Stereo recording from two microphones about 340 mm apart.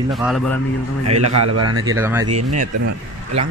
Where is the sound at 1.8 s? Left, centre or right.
Centre.